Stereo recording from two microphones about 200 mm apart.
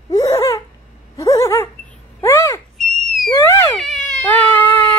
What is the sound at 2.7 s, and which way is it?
Owl, centre (ahead or behind).